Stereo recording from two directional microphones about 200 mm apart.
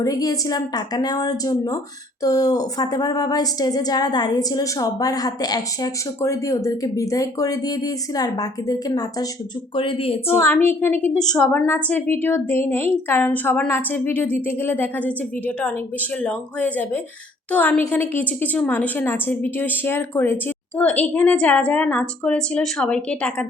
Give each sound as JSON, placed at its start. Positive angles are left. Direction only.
{"t": 0.0, "sound": "a woman's voice", "side_deg": 15}
{"t": 10.4, "sound": "a woman's voice", "side_deg": 10}